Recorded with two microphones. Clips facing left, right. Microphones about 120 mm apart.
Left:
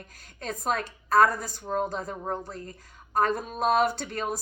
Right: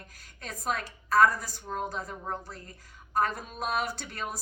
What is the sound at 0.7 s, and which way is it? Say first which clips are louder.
Speech: left 3 dB; 55° left (ahead or behind).